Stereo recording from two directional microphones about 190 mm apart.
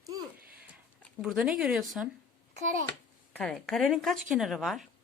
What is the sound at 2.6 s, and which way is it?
Speech, 40° right (ahead or behind).